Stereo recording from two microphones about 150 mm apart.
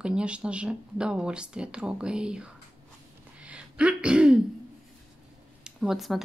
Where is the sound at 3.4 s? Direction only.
5° right (ahead or behind).